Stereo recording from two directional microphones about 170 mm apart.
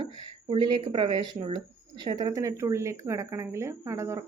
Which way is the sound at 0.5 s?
25° right (ahead or behind).